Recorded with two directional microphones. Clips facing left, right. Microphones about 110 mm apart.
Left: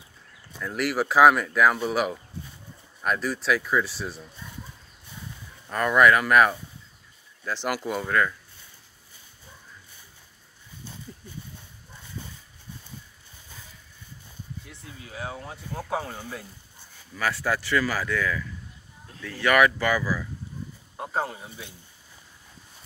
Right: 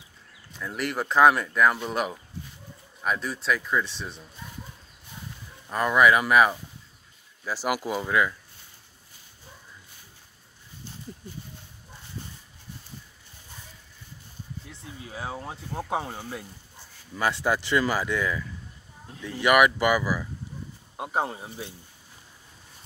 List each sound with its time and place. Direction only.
0.6 s speech: centre (ahead or behind)
5.7 s speech: 10° right (ahead or behind)
14.7 s speech: 30° right (ahead or behind)
21.3 s speech: 30° right (ahead or behind)